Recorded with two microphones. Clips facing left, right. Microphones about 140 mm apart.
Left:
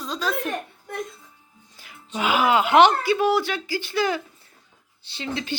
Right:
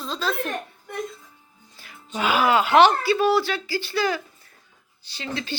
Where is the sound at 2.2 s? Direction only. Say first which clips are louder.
Even; 15° left (ahead or behind).